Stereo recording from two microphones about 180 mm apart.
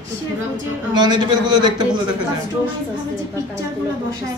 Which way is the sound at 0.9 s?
25° right (ahead or behind).